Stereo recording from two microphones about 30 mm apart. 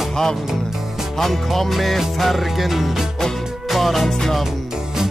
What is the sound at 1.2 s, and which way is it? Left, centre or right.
Music, centre.